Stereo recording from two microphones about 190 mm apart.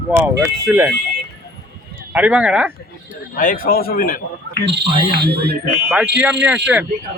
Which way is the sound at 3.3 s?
45° left (ahead or behind).